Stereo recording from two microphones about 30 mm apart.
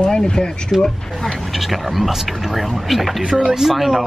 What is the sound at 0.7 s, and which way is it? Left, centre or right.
Speech, centre.